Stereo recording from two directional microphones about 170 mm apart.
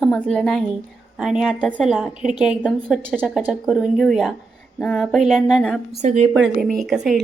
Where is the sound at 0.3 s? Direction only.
5° left (ahead or behind).